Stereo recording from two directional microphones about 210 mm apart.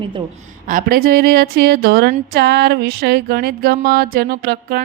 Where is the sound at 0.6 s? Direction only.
40° right (ahead or behind).